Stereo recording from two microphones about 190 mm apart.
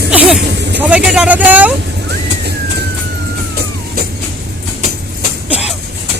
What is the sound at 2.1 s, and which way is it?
Vehicle, 60° right (ahead or behind).